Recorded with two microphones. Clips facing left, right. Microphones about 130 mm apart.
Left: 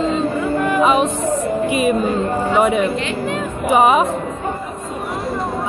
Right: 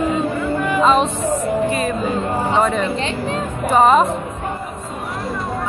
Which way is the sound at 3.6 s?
10° left (ahead or behind).